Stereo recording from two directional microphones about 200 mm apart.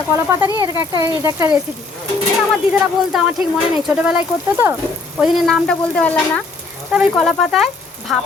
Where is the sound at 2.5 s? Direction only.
5° right (ahead or behind).